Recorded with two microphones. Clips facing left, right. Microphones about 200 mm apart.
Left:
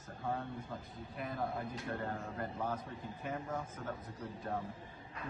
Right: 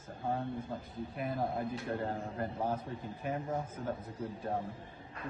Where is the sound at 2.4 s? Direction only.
35° right (ahead or behind).